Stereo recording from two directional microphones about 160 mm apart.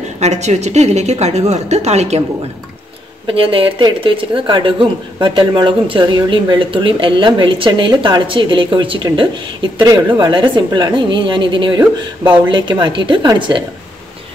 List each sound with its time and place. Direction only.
0.2 s a woman's voice: 45° right (ahead or behind)
3.3 s a woman's voice: 35° right (ahead or behind)
11.8 s speech: 15° right (ahead or behind)
12.4 s a woman's voice: 30° right (ahead or behind)